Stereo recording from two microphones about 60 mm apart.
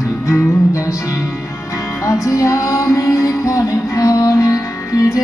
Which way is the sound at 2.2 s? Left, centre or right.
Left.